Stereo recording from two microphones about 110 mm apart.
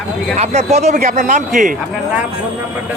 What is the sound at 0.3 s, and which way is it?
Speech, 80° right.